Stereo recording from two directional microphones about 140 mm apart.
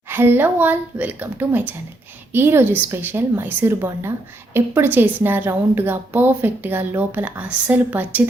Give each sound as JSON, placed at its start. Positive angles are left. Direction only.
{"t": 0.1, "sound": "a woman's voice", "side_deg": -15}